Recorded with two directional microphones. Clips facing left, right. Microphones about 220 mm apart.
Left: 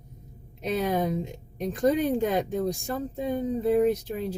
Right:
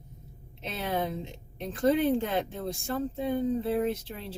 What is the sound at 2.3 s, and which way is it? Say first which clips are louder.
Speech: left 5 dB; 15° left (ahead or behind).